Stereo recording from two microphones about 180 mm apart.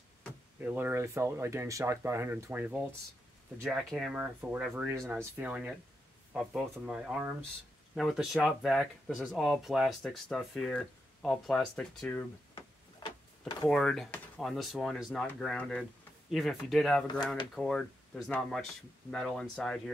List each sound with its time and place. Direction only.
0.6 s speech: 10° right (ahead or behind); by 12.3 s 5° left (ahead or behind)
13.0 s a sound: 25° left (ahead or behind)
13.7 s speech: 5° left (ahead or behind)